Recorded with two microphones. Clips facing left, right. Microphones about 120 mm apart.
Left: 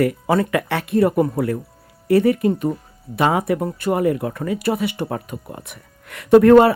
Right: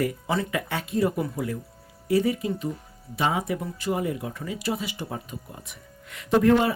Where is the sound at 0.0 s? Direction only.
65° left (ahead or behind).